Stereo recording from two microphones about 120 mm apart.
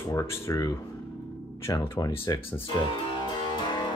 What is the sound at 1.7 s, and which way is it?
Speech, 30° left (ahead or behind).